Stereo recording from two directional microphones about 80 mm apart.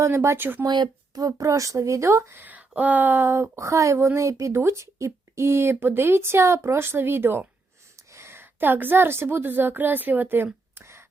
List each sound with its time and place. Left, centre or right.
0.0 s speech: right
0.6 s speech: right
1.4 s speech: right
2.4 s a woman's voice: right